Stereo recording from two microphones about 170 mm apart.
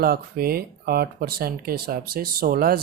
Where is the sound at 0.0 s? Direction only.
65° right (ahead or behind).